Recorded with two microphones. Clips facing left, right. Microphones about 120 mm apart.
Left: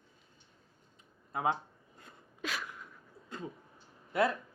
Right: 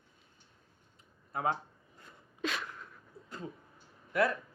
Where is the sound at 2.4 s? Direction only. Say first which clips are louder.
Right 3 dB; centre (ahead or behind).